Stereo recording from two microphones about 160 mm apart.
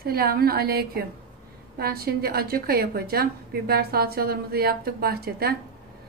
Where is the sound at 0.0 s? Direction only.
70° right (ahead or behind).